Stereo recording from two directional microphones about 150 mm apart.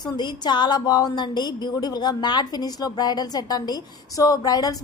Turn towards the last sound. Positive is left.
turn(degrees=25)  # may be behind; listen again after turning